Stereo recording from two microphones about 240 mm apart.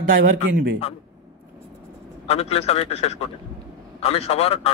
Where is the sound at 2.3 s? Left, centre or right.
Left.